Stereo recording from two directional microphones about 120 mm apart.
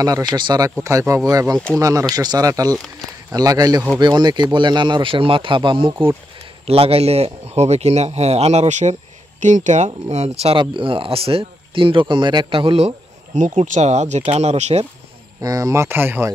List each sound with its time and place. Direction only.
0.0 s speech: 30° right (ahead or behind)
6.6 s speech: 55° right (ahead or behind); by 8.9 s 80° right
9.4 s speech: 90° right; by 10.6 s 60° right (ahead or behind)
10.6 s speech: 45° right (ahead or behind); by 14.9 s 60° right (ahead or behind)
15.4 s speech: 30° right (ahead or behind)